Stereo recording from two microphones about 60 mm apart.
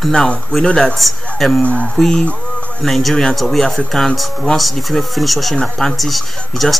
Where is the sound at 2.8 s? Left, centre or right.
Centre.